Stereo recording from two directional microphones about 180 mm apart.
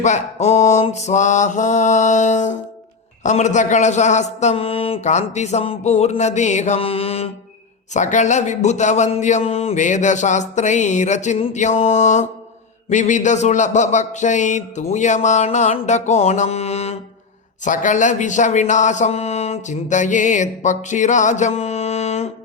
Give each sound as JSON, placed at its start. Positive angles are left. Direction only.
{"t": 0.0, "sound": "speech", "side_deg": 40}